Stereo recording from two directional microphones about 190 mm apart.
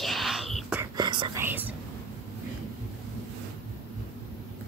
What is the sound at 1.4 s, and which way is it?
Speech, 10° right (ahead or behind).